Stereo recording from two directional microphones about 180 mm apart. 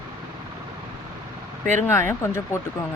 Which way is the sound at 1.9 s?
15° left (ahead or behind).